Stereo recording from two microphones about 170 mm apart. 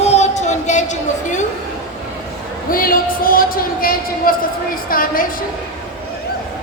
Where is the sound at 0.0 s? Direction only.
40° left (ahead or behind).